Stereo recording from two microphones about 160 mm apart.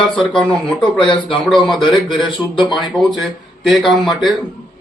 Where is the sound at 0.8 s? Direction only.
30° left (ahead or behind).